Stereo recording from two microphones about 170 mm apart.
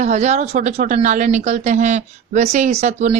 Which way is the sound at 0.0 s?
45° right (ahead or behind).